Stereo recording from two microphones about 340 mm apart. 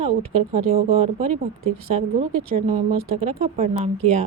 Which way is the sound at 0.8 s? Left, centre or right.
Centre.